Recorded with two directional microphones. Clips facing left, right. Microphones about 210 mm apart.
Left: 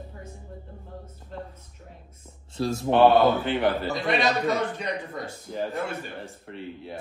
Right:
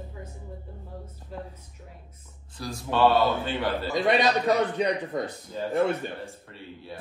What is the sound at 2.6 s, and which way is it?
A man's voice, 25° left (ahead or behind).